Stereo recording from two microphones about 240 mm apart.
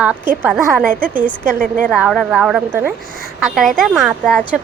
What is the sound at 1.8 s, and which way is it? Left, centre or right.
A woman's voice, centre.